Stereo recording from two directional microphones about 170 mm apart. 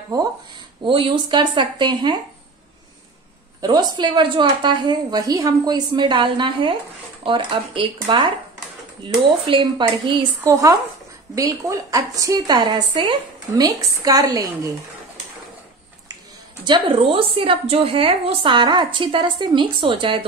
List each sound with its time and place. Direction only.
0.8 s a woman's voice: 30° right (ahead or behind)
3.6 s a woman's voice: 25° right (ahead or behind)
16.6 s a woman's voice: 30° right (ahead or behind)